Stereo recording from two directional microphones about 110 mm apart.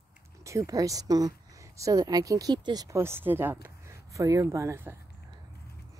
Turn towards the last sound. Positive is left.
turn(degrees=-25)  # may be behind; listen again after turning